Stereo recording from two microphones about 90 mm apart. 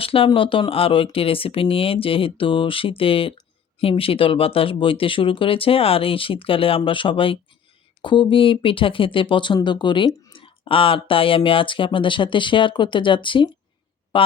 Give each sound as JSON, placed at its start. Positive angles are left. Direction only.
{"t": 0.0, "sound": "speech", "side_deg": 90}
{"t": 0.3, "sound": "speech", "side_deg": 75}
{"t": 8.0, "sound": "speech", "side_deg": 65}
{"t": 10.3, "sound": "speech", "side_deg": 75}